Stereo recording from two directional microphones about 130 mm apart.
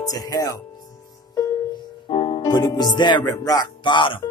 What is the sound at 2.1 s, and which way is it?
Music, 40° left (ahead or behind).